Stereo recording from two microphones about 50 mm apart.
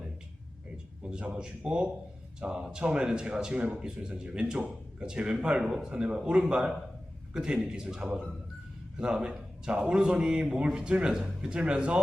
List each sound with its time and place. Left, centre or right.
1.2 s a man's voice: right